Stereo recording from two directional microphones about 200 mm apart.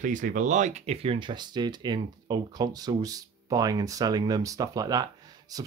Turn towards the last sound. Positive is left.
turn(degrees=-20)  # may be behind; listen again after turning